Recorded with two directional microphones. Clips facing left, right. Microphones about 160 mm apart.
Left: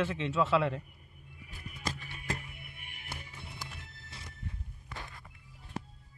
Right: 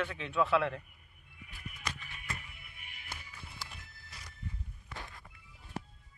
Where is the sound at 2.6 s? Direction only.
55° left (ahead or behind).